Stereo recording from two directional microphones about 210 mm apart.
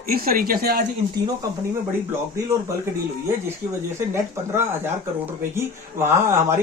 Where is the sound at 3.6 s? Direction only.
40° right (ahead or behind).